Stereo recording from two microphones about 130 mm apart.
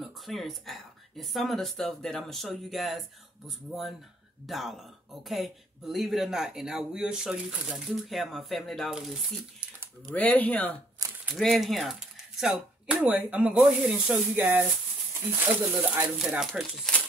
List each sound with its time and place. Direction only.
0.0 s speech: centre (ahead or behind)
10.0 s speech: 10° left (ahead or behind)
11.0 s a sound: 25° right (ahead or behind)
11.3 s speech: centre (ahead or behind)
16.3 s speech: centre (ahead or behind)